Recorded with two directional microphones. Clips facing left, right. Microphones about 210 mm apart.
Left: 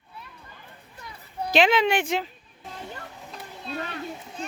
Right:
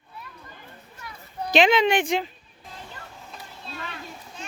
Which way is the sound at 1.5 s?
5° left (ahead or behind).